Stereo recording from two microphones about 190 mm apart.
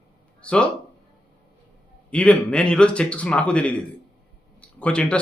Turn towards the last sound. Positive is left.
turn(degrees=5)  # may be behind; listen again after turning